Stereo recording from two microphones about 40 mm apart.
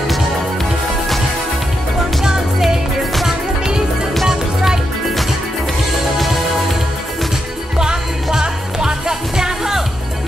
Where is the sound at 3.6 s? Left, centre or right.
Centre.